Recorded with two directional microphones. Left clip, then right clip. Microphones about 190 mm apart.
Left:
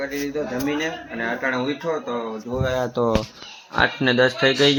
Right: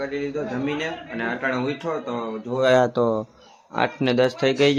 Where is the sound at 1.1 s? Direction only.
5° right (ahead or behind).